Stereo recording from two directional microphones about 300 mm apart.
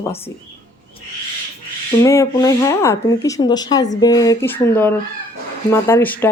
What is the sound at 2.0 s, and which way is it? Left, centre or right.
Speech, centre.